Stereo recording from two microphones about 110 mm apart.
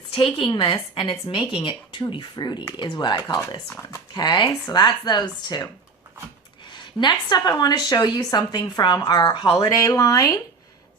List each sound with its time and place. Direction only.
0.1 s speech: 55° left (ahead or behind)
6.7 s speech: 45° left (ahead or behind)